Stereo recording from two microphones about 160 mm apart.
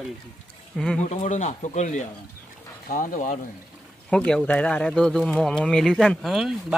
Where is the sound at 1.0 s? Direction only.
45° left (ahead or behind).